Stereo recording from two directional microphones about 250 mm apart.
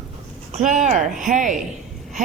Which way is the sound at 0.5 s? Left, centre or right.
Right.